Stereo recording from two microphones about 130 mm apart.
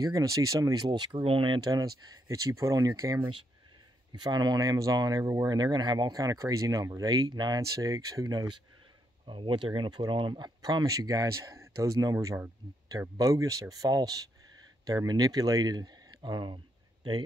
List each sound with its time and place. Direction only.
0.0 s speech: 25° right (ahead or behind)
0.9 s speech: 40° right (ahead or behind)
9.2 s speech: 40° right (ahead or behind)